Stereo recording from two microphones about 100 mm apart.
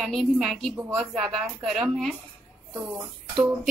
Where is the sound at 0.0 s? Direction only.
Centre (ahead or behind).